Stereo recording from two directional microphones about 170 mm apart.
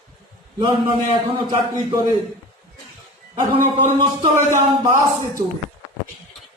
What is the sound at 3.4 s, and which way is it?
Speech, 25° right (ahead or behind).